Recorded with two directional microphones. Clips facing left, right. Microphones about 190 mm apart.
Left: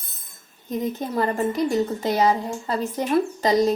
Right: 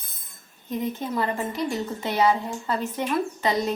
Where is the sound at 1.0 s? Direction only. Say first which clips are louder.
Left 4 dB; 45° left (ahead or behind).